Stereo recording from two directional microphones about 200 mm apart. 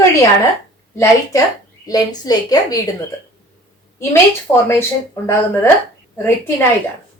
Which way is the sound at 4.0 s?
15° left (ahead or behind).